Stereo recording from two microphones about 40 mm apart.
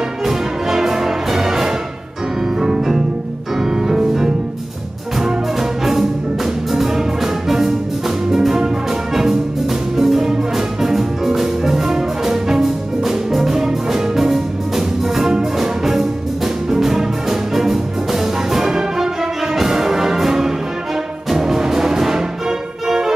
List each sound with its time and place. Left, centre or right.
0.2 s music: centre